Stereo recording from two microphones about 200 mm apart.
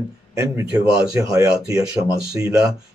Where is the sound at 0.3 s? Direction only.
15° right (ahead or behind).